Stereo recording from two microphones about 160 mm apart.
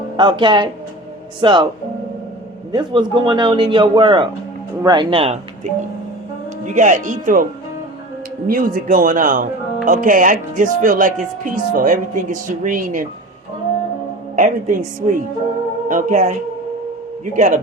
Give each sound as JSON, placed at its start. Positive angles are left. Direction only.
{"t": 0.2, "sound": "a man's voice", "side_deg": -30}
{"t": 2.7, "sound": "a man's voice", "side_deg": -25}
{"t": 5.1, "sound": "speech", "side_deg": -35}
{"t": 6.7, "sound": "a woman's voice", "side_deg": -50}
{"t": 8.4, "sound": "speech", "side_deg": -60}
{"t": 14.3, "sound": "a woman's voice", "side_deg": -55}
{"t": 17.3, "sound": "a woman's voice", "side_deg": -50}